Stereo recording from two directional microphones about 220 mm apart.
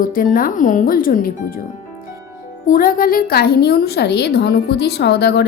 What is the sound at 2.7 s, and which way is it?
A woman's voice, 40° left (ahead or behind).